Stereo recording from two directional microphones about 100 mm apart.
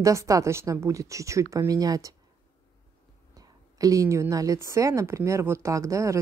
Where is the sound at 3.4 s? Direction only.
35° right (ahead or behind).